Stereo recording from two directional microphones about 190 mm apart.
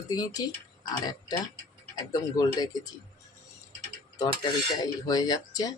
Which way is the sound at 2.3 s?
20° left (ahead or behind).